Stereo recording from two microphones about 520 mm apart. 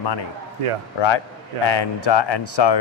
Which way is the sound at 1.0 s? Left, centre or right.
Left.